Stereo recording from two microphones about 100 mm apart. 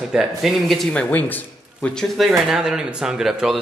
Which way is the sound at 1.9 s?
Centre (ahead or behind).